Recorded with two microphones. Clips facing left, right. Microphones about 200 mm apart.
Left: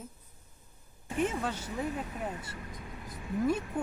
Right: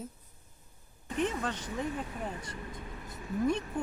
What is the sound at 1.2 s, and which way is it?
Speech, 10° left (ahead or behind).